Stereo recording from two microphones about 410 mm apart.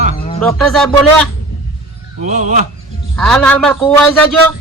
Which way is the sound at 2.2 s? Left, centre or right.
Centre.